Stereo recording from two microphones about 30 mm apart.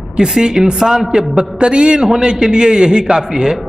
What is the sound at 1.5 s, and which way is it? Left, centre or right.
A man's voice, right.